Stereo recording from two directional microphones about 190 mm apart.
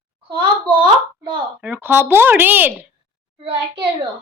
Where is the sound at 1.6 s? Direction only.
10° right (ahead or behind).